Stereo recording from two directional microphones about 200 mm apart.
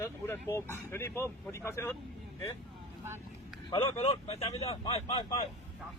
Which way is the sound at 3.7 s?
30° left (ahead or behind).